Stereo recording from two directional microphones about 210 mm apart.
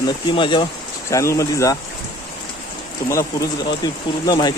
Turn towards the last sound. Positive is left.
turn(degrees=20)  # may be behind; listen again after turning